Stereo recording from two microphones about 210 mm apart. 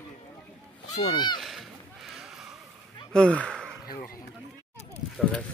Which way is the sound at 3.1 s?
5° left (ahead or behind).